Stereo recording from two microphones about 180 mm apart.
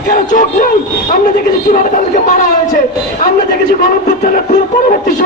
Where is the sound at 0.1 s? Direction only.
50° left (ahead or behind).